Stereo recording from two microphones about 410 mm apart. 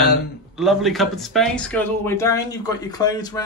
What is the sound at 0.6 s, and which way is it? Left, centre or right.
Speech, centre.